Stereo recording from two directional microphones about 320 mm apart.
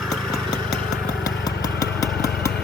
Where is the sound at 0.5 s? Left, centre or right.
Left.